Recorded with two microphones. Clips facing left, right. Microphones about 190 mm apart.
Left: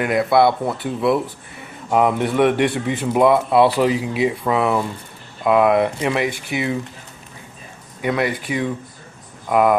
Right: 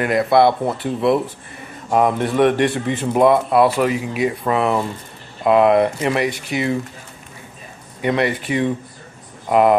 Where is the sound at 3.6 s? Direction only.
30° left (ahead or behind).